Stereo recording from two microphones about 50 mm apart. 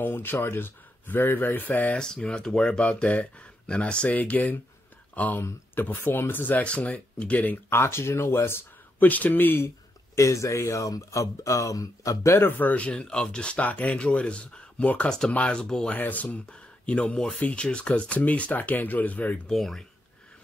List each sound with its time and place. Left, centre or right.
0.0 s speech: left
2.0 s speech: centre; by 6.6 s left
6.6 s speech: left
7.7 s speech: left
9.0 s speech: left
10.1 s speech: left
12.4 s speech: left
12.7 s speech: left
13.6 s speech: left; by 15.9 s centre
15.9 s speech: left
19.4 s speech: centre